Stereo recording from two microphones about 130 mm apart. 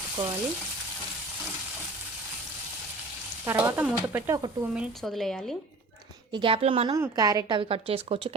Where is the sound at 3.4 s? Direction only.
15° right (ahead or behind).